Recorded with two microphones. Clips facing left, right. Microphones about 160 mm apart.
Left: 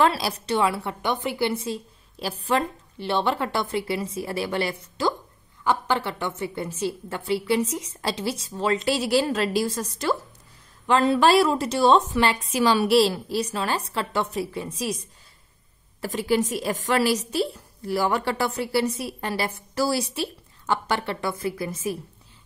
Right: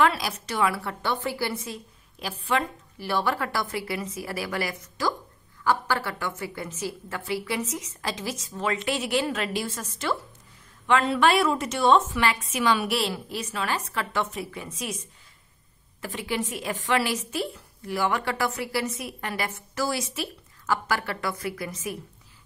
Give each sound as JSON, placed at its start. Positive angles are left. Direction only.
{"t": 0.0, "sound": "a woman's voice", "side_deg": 30}
{"t": 3.0, "sound": "a woman's voice", "side_deg": 25}